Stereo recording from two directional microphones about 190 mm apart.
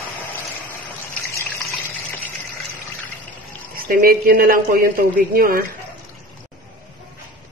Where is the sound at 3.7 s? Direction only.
50° right (ahead or behind).